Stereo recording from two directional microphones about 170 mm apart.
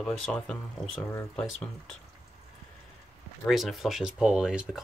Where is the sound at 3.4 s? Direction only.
Centre (ahead or behind).